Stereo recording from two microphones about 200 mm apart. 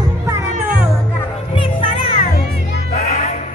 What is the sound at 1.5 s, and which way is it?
Children playing, 25° left (ahead or behind).